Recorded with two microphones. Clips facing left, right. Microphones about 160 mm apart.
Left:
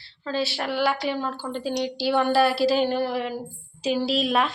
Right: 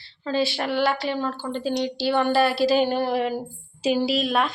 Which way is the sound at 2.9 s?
20° right (ahead or behind).